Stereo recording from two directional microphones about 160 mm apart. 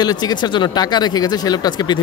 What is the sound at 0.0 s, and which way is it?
Speech, 25° left (ahead or behind).